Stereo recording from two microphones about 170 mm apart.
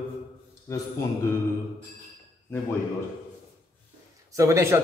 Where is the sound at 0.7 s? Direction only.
20° left (ahead or behind).